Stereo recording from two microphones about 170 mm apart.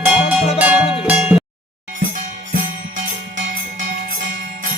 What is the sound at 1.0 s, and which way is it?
Cowbell, 5° right (ahead or behind).